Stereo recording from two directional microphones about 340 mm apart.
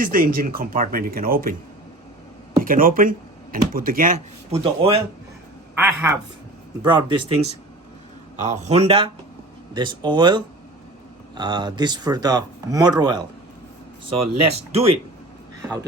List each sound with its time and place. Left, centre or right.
0.0 s speech: right
2.6 s speech: right